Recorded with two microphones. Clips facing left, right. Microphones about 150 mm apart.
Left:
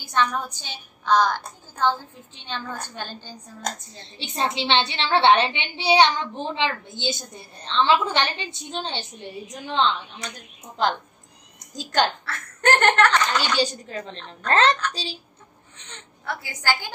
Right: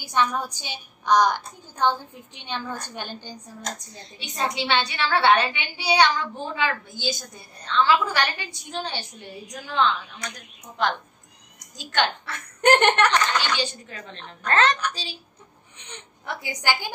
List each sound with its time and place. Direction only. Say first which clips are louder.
0.0 s a woman's voice: even; 10° right (ahead or behind)
4.2 s a woman's voice: left 2 dB; 30° left (ahead or behind)
12.3 s a woman's voice: right 3 dB; 15° right (ahead or behind)
13.6 s a woman's voice: left 6 dB; 35° left (ahead or behind)
15.8 s a woman's voice: even; 15° right (ahead or behind)